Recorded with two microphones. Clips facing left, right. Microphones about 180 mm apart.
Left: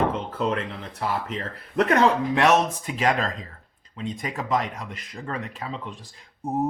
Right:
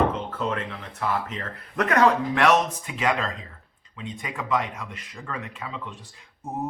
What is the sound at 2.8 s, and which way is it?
Speech, 35° left (ahead or behind).